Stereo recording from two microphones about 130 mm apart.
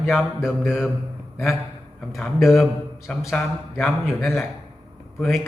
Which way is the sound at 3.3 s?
10° left (ahead or behind).